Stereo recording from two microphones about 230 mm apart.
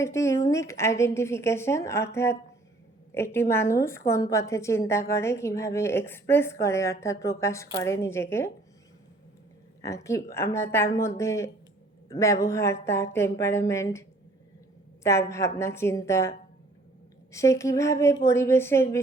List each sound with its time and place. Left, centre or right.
0.0 s a woman's voice: centre
9.8 s a woman's voice: centre
15.0 s a woman's voice: centre
17.3 s a woman's voice: centre